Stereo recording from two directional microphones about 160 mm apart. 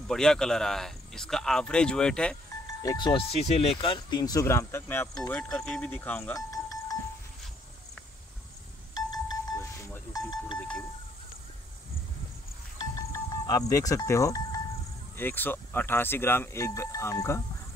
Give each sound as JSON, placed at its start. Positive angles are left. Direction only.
{"t": 0.1, "sound": "speech", "side_deg": 5}
{"t": 2.8, "sound": "speech", "side_deg": 25}
{"t": 6.3, "sound": "music", "side_deg": 20}
{"t": 8.9, "sound": "music", "side_deg": 25}
{"t": 9.8, "sound": "a sound", "side_deg": 15}
{"t": 10.6, "sound": "wind chime", "side_deg": 10}
{"t": 12.7, "sound": "music", "side_deg": 25}
{"t": 15.1, "sound": "speech", "side_deg": 10}